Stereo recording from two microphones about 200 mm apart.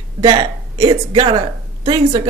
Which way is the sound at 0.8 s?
25° right (ahead or behind).